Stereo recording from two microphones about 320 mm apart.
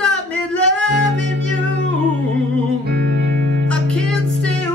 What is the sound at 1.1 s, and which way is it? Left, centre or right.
Music, right.